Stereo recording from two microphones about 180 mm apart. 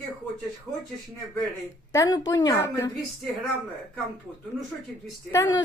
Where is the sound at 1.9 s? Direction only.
20° left (ahead or behind).